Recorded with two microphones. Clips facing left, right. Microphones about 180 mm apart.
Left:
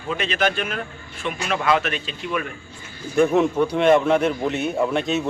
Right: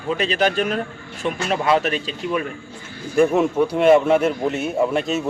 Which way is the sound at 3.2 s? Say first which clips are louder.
Right 1 dB; 5° right (ahead or behind).